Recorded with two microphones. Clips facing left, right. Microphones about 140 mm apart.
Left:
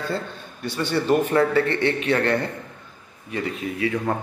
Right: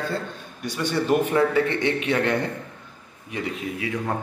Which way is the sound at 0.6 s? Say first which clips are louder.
Left 1 dB; 10° right (ahead or behind).